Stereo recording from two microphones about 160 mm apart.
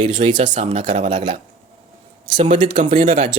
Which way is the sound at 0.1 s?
50° right (ahead or behind).